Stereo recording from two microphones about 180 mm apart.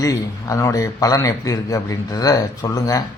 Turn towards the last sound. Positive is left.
turn(degrees=20)  # may be behind; listen again after turning